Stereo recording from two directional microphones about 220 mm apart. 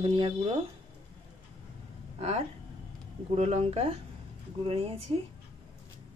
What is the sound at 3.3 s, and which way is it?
Speech, 30° right (ahead or behind).